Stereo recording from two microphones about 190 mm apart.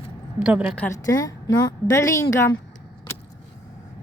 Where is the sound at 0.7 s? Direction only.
10° left (ahead or behind).